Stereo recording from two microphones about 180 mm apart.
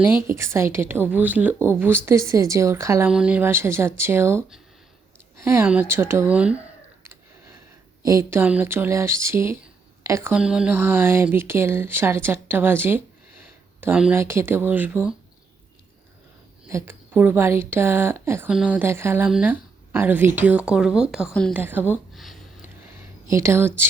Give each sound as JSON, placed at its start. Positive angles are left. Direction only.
{"t": 0.0, "sound": "speech", "side_deg": -10}
{"t": 3.1, "sound": "speech", "side_deg": -5}
{"t": 5.6, "sound": "speech", "side_deg": -10}
{"t": 8.0, "sound": "speech", "side_deg": -15}
{"t": 16.6, "sound": "speech", "side_deg": -15}
{"t": 21.5, "sound": "speech", "side_deg": -10}
{"t": 22.1, "sound": "a sound", "side_deg": 0}
{"t": 23.3, "sound": "speech", "side_deg": -15}